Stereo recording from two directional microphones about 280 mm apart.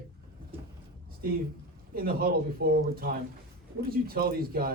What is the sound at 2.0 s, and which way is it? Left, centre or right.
Speech, right.